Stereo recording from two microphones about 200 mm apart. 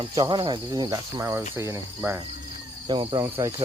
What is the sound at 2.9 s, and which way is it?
Speech, 25° right (ahead or behind).